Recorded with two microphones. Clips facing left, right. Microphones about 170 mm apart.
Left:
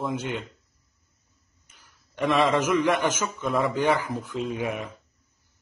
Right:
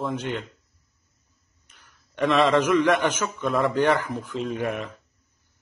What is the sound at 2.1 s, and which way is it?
A man's voice, 5° left (ahead or behind).